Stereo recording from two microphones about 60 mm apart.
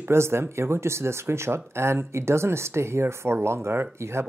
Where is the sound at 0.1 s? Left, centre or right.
Right.